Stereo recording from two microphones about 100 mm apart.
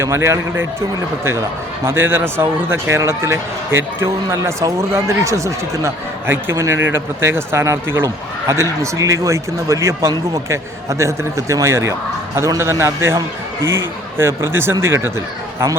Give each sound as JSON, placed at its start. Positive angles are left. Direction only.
{"t": 0.0, "sound": "speech", "side_deg": -25}